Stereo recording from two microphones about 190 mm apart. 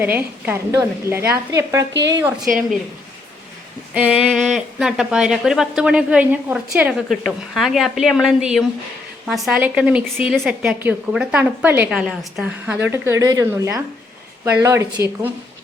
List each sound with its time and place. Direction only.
0.0 s a woman's voice: 10° right (ahead or behind)
1.9 s a woman's voice: 70° right (ahead or behind)
3.9 s a woman's voice: 5° right (ahead or behind)